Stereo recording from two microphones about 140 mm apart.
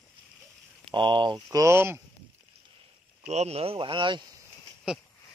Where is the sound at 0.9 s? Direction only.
35° right (ahead or behind); by 2.0 s 15° right (ahead or behind).